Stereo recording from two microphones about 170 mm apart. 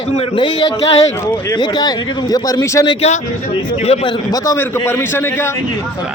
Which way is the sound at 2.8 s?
40° left (ahead or behind).